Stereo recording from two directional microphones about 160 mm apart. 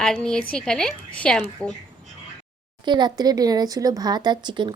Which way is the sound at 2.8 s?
25° right (ahead or behind).